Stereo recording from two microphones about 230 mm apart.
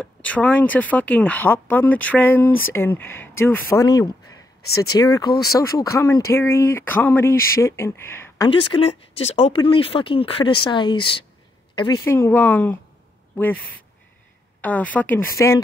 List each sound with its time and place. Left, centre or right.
0.0 s speech: centre
4.2 s a sound: left
4.9 s a woman's voice: centre
12.0 s speech: centre
14.6 s speech: centre